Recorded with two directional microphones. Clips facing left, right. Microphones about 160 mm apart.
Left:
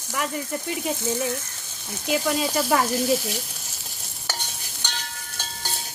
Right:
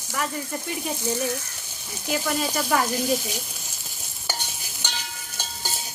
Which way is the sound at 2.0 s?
20° left (ahead or behind).